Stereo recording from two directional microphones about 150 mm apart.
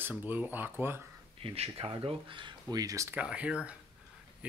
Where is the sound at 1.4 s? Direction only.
40° right (ahead or behind); by 3.1 s 20° right (ahead or behind).